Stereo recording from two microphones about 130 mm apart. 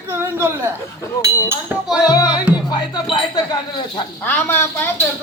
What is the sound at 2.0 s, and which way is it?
Speech, 30° left (ahead or behind).